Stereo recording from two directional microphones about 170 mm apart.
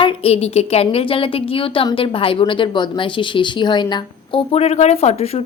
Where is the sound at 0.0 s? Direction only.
35° left (ahead or behind).